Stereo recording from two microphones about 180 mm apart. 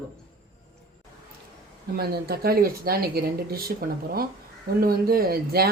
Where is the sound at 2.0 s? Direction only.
60° right (ahead or behind).